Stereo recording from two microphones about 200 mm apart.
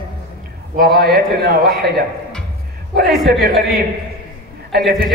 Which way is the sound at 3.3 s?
50° right (ahead or behind).